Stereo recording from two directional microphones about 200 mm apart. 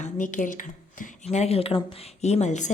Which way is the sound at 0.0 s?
40° left (ahead or behind).